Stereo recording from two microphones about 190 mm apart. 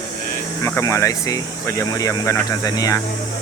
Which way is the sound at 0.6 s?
15° left (ahead or behind).